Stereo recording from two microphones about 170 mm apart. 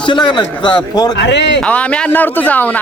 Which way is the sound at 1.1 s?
90° left.